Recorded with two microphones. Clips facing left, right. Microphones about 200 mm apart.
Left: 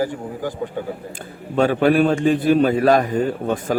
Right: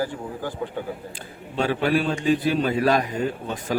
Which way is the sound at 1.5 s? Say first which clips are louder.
Left 6 dB; 50° left (ahead or behind).